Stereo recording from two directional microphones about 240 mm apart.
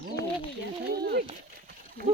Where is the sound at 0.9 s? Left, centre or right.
Right.